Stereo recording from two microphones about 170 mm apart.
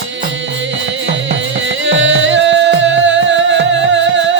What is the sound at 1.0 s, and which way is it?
Music, 90° right.